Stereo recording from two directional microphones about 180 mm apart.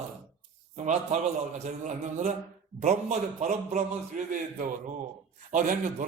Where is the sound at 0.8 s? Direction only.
40° right (ahead or behind).